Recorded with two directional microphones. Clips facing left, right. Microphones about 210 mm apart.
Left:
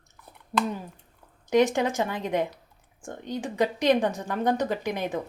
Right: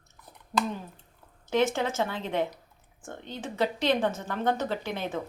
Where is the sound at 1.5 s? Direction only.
15° left (ahead or behind).